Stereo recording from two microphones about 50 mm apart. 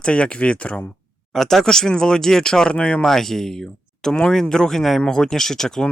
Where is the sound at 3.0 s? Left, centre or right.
Centre.